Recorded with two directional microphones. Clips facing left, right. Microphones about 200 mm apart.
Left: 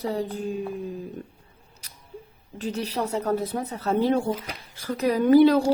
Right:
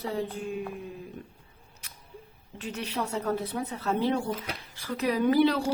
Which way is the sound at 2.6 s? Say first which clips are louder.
Left 5 dB; 35° left (ahead or behind).